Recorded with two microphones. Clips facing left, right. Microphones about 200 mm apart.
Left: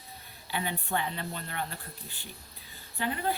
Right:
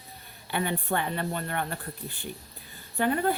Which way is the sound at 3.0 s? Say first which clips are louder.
Right 6 dB; 50° right (ahead or behind).